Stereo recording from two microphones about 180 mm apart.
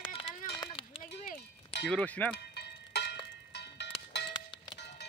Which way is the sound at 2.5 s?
65° left (ahead or behind).